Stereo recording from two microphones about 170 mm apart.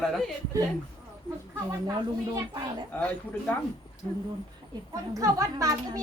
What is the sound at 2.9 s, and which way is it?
Speech, 10° left (ahead or behind).